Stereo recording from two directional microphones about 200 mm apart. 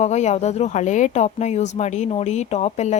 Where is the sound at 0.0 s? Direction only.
35° left (ahead or behind).